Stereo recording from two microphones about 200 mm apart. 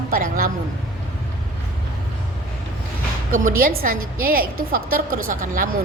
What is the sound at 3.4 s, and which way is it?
A woman's voice, 45° right (ahead or behind).